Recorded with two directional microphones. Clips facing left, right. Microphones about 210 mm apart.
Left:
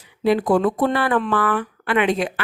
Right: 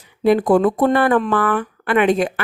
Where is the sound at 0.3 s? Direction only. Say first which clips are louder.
Right 3 dB; 50° right (ahead or behind).